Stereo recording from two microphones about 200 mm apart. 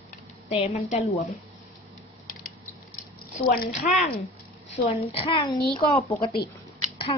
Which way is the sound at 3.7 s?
35° left (ahead or behind).